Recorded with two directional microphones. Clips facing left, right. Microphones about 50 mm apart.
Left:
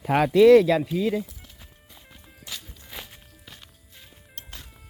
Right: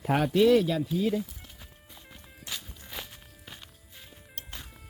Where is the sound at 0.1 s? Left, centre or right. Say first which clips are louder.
Left 7 dB; left.